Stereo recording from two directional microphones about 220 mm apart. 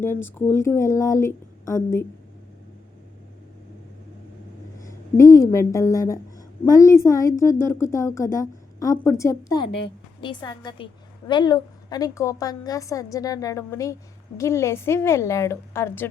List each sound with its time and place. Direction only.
0.0 s speech: 10° left (ahead or behind)
4.8 s a woman's voice: 15° left (ahead or behind)